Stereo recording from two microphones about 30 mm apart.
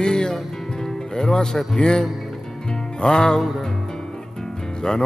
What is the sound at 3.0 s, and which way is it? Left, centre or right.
Music, left.